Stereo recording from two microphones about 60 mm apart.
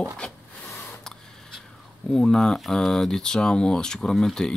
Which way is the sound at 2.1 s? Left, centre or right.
Centre.